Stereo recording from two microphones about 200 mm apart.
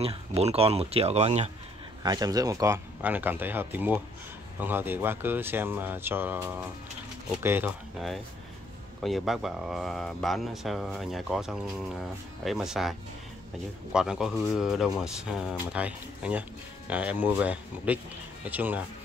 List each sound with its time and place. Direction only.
0.0 s speech: 30° right (ahead or behind)
2.0 s speech: 20° right (ahead or behind)
9.0 s speech: centre (ahead or behind)
13.9 s speech: 5° right (ahead or behind)